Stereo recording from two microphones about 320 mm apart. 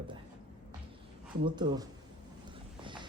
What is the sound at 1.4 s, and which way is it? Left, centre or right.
Speech, centre.